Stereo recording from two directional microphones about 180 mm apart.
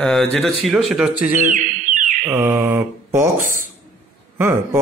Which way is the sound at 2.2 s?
10° right (ahead or behind).